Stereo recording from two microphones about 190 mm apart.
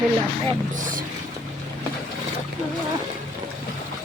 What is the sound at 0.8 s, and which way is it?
Speech, 45° right (ahead or behind).